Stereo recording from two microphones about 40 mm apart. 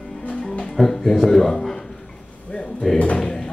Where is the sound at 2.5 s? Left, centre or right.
Left.